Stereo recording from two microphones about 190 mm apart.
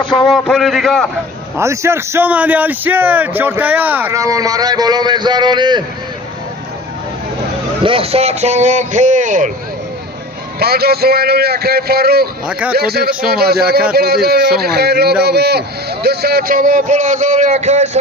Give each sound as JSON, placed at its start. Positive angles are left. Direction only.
{"t": 0.0, "sound": "a man's voice", "side_deg": 25}
{"t": 0.3, "sound": "a man's voice", "side_deg": 0}
{"t": 1.5, "sound": "a man's voice", "side_deg": -15}
{"t": 7.9, "sound": "a man's voice", "side_deg": -30}
{"t": 10.6, "sound": "a man's voice", "side_deg": -55}
{"t": 12.5, "sound": "a man's voice", "side_deg": -5}
{"t": 12.7, "sound": "a man's voice", "side_deg": -55}